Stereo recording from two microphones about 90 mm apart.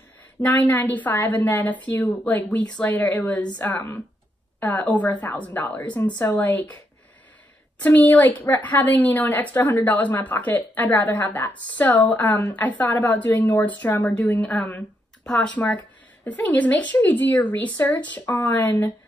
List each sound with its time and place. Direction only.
0.4 s a woman's voice: 20° left (ahead or behind)
7.8 s a woman's voice: 20° left (ahead or behind)
15.2 s a woman's voice: 5° left (ahead or behind)
15.5 s a woman's voice: 15° left (ahead or behind)